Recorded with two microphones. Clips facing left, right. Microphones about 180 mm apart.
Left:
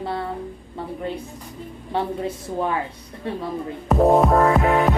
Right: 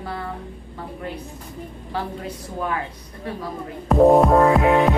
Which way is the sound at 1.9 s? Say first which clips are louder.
Left 5 dB; 25° left (ahead or behind).